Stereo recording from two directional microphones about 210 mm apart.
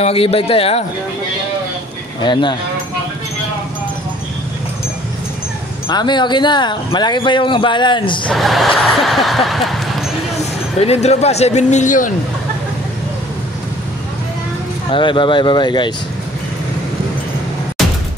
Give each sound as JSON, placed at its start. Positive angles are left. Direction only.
{"t": 0.0, "sound": "speech", "side_deg": 25}
{"t": 2.2, "sound": "speech", "side_deg": 20}
{"t": 5.9, "sound": "speech", "side_deg": 20}
{"t": 8.3, "sound": "speech", "side_deg": 0}
{"t": 10.3, "sound": "speech", "side_deg": 30}
{"t": 14.9, "sound": "speech", "side_deg": 25}